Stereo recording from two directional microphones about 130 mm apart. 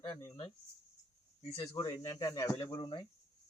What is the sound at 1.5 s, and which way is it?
Speech, 45° left (ahead or behind).